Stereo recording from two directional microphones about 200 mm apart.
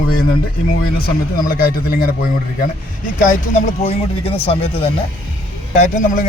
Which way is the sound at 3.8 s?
30° left (ahead or behind).